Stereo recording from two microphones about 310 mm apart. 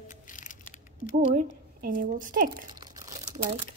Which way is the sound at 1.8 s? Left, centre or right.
Right.